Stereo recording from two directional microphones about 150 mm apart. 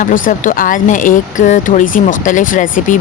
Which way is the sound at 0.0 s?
60° left (ahead or behind).